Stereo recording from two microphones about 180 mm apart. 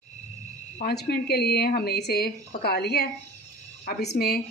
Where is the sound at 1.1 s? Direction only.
60° left (ahead or behind).